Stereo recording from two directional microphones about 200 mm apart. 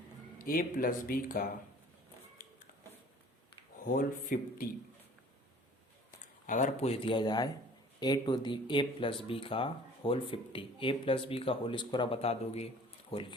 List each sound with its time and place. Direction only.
0.3 s speech: 45° left (ahead or behind)
3.8 s speech: 45° left (ahead or behind)
6.5 s speech: 40° left (ahead or behind)